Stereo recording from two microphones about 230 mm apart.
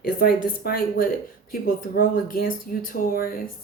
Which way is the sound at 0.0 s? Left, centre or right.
Left.